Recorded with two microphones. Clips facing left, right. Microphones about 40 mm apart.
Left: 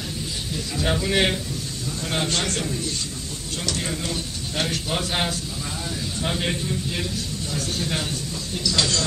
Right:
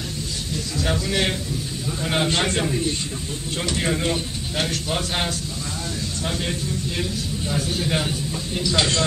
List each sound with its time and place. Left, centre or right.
0.7 s a man's voice: centre
2.0 s a man's voice: centre
4.6 s a man's voice: centre
6.2 s a man's voice: centre
7.5 s speech: centre